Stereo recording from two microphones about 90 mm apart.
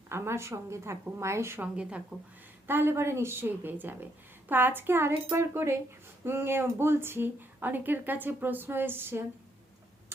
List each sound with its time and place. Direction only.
0.1 s a woman's voice: 30° right (ahead or behind)
1.6 s a woman's voice: 10° right (ahead or behind)
2.6 s speech: 25° right (ahead or behind)